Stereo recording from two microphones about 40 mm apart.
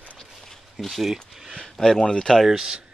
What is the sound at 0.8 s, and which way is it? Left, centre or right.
Speech, centre.